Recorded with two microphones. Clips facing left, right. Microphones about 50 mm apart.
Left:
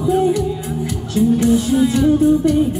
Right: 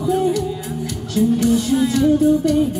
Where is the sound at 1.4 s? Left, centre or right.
Centre.